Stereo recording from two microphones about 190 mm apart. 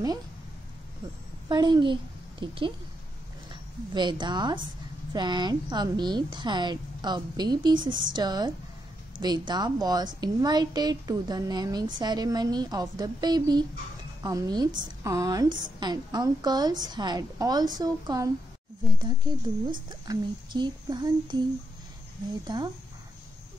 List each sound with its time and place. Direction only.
1.5 s a woman's voice: 25° right (ahead or behind)
3.9 s a woman's voice: 25° right (ahead or behind)
22.5 s a woman's voice: 25° right (ahead or behind)